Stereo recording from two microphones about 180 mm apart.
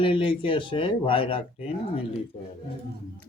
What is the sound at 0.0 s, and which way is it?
Speech, 30° left (ahead or behind).